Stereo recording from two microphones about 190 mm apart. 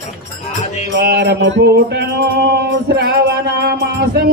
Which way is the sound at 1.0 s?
60° right (ahead or behind).